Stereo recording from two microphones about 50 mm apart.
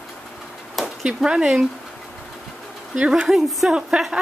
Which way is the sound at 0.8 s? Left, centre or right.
Centre.